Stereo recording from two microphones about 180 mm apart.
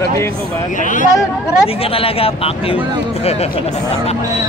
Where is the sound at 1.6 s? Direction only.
30° left (ahead or behind).